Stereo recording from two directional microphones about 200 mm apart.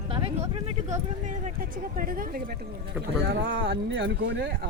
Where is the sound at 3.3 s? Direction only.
60° right (ahead or behind).